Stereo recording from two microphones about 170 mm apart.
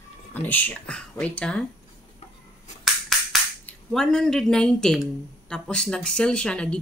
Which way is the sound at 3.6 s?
5° left (ahead or behind).